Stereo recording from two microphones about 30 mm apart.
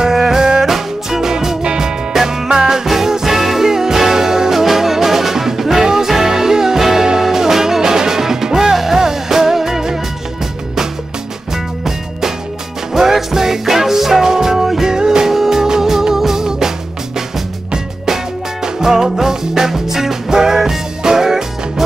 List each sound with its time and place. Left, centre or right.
0.0 s music: centre
11.5 s music: centre
18.0 s music: centre